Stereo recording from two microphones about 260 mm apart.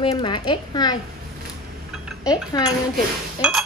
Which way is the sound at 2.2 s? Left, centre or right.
Centre.